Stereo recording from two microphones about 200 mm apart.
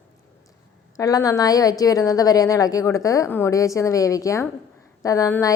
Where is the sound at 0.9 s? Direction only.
20° left (ahead or behind).